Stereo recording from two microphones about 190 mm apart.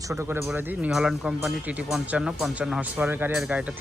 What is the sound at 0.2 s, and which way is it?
Speech, 15° right (ahead or behind).